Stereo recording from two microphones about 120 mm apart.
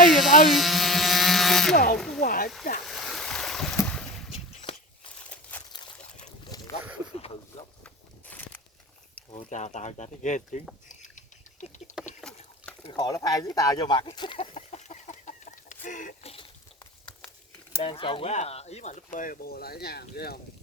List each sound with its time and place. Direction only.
0.1 s a sound: centre (ahead or behind)
3.8 s boat: 5° left (ahead or behind)
5.3 s a sound: 15° left (ahead or behind)
6.5 s boat: 30° left (ahead or behind)
7.9 s walk: 15° left (ahead or behind)
9.3 s speech: 75° left (ahead or behind)
10.8 s a sound: 90° left
12.2 s rowboat: 5° left (ahead or behind)
12.9 s speech: 35° left (ahead or behind)
14.3 s chicken: 70° left (ahead or behind); by 16.3 s 90° left
17.8 s speech: 45° left (ahead or behind)
18.3 s speech: 65° left (ahead or behind); by 19.3 s 85° left